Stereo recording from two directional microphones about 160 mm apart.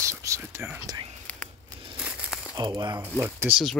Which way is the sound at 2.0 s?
5° right (ahead or behind).